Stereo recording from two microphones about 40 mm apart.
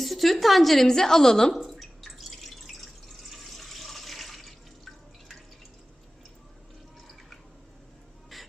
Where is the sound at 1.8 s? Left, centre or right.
Centre.